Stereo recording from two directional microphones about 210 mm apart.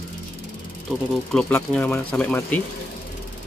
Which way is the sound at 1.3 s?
5° left (ahead or behind).